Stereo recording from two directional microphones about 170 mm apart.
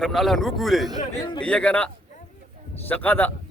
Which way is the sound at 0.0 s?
Centre (ahead or behind).